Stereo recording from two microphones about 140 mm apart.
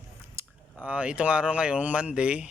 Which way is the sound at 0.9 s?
10° right (ahead or behind).